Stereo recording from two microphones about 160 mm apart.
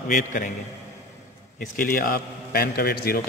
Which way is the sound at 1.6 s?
65° left (ahead or behind).